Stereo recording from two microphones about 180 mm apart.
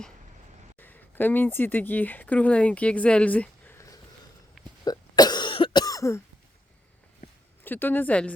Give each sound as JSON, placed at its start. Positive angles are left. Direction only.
{"t": 0.8, "sound": "speech", "side_deg": 10}
{"t": 4.9, "sound": "cough", "side_deg": 20}
{"t": 7.6, "sound": "a woman's voice", "side_deg": 10}